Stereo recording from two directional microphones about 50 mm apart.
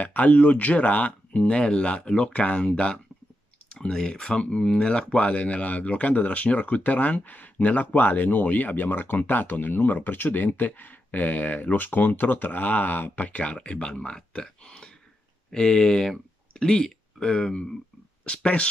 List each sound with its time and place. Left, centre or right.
0.0 s speech: left